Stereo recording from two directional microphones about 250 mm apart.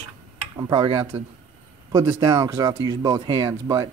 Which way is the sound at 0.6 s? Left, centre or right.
Centre.